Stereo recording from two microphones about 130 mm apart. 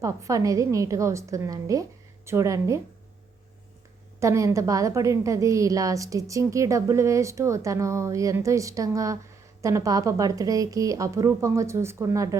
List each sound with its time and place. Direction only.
0.0 s a woman's voice: 25° right (ahead or behind)
4.2 s a woman's voice: 25° right (ahead or behind)